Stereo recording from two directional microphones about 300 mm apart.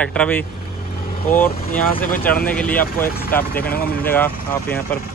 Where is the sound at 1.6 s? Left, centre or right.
Left.